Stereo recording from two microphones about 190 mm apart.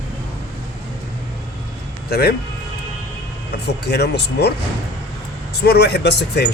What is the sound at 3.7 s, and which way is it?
Speech, 60° left (ahead or behind).